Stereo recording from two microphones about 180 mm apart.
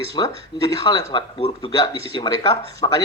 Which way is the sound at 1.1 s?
30° left (ahead or behind).